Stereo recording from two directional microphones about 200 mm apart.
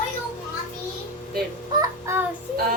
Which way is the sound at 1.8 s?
15° right (ahead or behind).